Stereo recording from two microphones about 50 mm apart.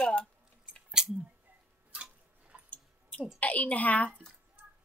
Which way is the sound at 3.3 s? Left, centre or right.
Left.